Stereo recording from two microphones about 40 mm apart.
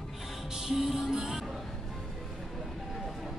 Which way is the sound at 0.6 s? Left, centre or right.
Centre.